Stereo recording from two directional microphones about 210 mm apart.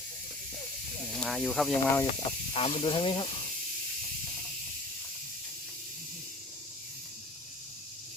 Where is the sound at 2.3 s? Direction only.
25° left (ahead or behind).